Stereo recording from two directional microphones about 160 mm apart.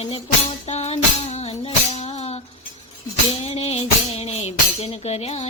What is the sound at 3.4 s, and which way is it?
Music, 40° left (ahead or behind).